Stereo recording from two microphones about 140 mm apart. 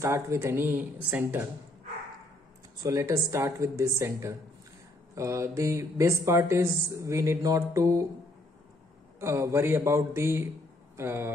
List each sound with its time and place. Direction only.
0.0 s speech: 20° right (ahead or behind)
2.8 s speech: 20° right (ahead or behind)
9.2 s speech: 20° right (ahead or behind)